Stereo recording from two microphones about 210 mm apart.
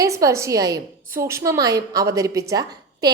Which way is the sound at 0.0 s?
15° right (ahead or behind).